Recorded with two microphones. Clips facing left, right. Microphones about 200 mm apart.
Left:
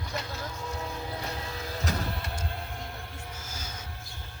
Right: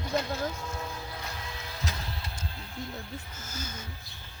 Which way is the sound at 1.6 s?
40° left (ahead or behind).